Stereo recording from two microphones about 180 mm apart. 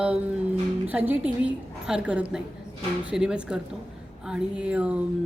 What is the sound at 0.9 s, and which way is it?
Speech, 10° right (ahead or behind).